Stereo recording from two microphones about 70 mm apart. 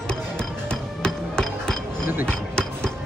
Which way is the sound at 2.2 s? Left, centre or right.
Centre.